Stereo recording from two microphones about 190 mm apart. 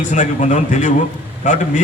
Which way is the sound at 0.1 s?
40° left (ahead or behind).